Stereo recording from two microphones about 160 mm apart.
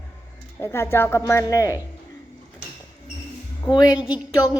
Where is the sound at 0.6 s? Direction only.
15° left (ahead or behind).